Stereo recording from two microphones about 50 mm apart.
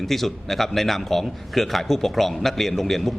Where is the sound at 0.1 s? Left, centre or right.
Centre.